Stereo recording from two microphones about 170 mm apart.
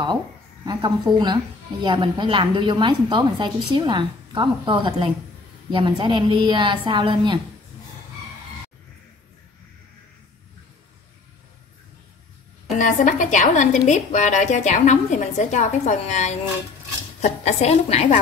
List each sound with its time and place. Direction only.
0.7 s a woman's voice: 25° right (ahead or behind)
12.7 s a woman's voice: 45° left (ahead or behind)